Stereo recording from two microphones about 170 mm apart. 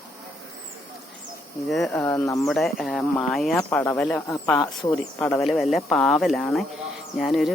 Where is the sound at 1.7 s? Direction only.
Centre (ahead or behind).